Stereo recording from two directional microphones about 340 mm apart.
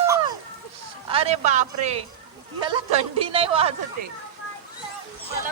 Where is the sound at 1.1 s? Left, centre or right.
Centre.